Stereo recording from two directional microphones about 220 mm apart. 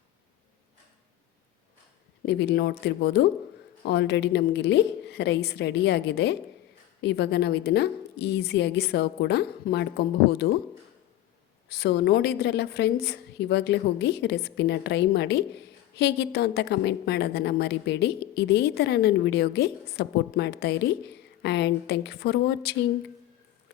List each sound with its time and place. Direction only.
2.2 s a woman's voice: 50° left (ahead or behind)
11.7 s a woman's voice: 45° left (ahead or behind)